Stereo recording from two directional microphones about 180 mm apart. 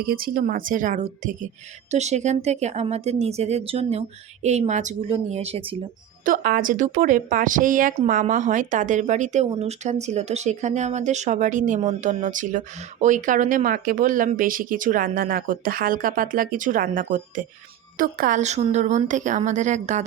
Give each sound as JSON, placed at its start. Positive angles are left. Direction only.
{"t": 0.0, "sound": "speech", "side_deg": -55}
{"t": 6.2, "sound": "speech", "side_deg": -55}